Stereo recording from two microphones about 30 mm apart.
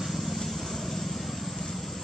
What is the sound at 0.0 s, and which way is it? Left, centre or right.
Vehicle, centre.